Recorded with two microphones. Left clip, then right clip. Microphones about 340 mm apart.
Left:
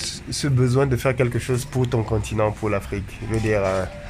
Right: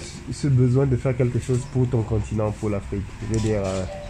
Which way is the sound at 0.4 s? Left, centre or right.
Left.